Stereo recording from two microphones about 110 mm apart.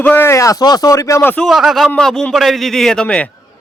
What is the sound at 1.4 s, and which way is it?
A man's voice, centre (ahead or behind).